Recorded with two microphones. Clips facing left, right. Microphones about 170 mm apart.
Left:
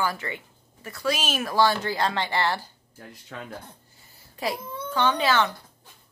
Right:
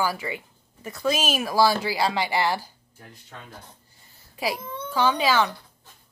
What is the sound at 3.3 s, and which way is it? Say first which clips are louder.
Speech: left 6 dB; 90° left.